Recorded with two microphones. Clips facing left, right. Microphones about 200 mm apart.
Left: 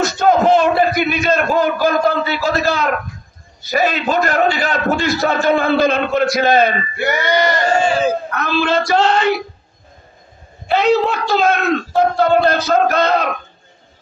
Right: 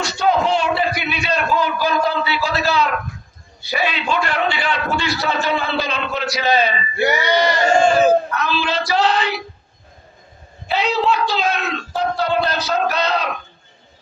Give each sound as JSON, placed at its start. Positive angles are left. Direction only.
{"t": 0.0, "sound": "a sound", "side_deg": 50}
{"t": 3.6, "sound": "a man's voice", "side_deg": 45}
{"t": 10.7, "sound": "a man's voice", "side_deg": 50}